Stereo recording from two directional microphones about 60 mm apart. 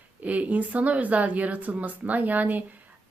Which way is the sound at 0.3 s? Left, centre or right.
Right.